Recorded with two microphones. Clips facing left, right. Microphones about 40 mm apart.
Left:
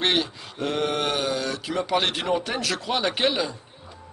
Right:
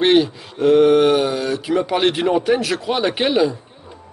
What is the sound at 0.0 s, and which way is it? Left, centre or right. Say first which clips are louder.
Speech: right 9 dB; centre.